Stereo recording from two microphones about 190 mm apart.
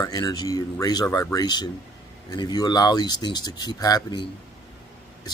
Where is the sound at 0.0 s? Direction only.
20° left (ahead or behind).